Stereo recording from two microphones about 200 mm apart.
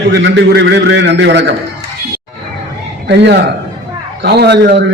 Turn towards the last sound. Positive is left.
turn(degrees=-55)  # may be behind; listen again after turning